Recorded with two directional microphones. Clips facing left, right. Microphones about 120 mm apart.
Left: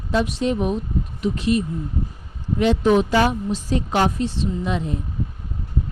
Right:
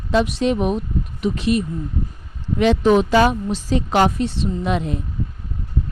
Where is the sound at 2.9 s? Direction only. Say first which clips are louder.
Right 3 dB; 90° right; by 5.0 s 70° right (ahead or behind).